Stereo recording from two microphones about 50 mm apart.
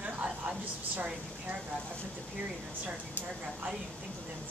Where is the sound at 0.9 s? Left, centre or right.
Right.